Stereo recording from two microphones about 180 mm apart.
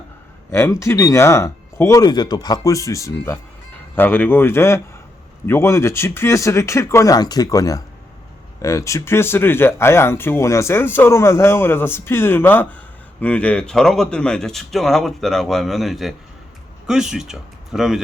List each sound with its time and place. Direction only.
0.5 s speech: 15° left (ahead or behind); by 18.0 s centre (ahead or behind)